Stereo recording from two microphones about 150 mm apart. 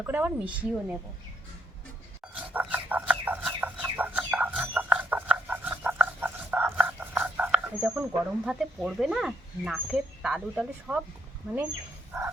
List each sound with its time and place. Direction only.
0.0 s a woman's voice: 10° right (ahead or behind)
2.3 s chicken: 10° right (ahead or behind)
8.4 s speech: 5° right (ahead or behind)